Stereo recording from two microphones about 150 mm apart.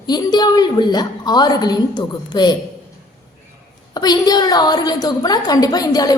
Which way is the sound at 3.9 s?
25° left (ahead or behind).